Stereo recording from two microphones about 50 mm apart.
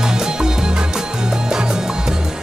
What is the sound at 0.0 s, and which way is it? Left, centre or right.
Music, centre.